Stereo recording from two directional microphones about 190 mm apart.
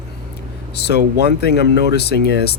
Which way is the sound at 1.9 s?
60° left (ahead or behind).